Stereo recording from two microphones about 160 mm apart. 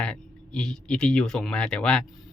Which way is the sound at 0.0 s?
5° left (ahead or behind).